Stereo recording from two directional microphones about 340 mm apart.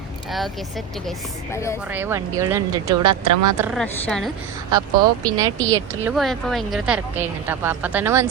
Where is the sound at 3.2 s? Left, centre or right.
Right.